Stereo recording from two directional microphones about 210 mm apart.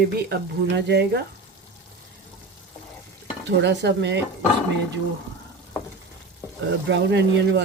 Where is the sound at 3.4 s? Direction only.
55° right (ahead or behind).